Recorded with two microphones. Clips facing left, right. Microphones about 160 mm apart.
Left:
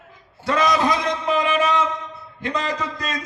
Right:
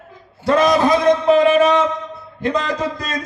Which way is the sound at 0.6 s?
30° right (ahead or behind).